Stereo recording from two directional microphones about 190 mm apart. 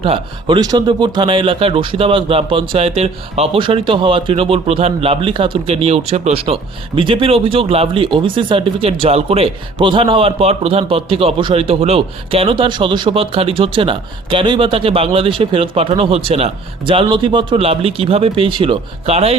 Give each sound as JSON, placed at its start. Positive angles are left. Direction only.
{"t": 0.0, "sound": "speech", "side_deg": -25}